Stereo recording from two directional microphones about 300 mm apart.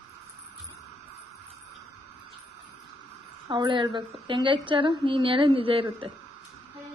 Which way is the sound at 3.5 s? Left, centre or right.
Centre.